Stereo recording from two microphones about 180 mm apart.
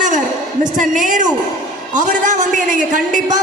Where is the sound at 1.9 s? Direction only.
45° right (ahead or behind).